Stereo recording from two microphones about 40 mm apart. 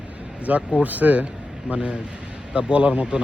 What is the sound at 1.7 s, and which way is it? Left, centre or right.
Speech, right.